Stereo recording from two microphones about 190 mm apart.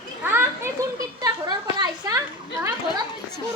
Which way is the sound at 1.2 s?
20° right (ahead or behind).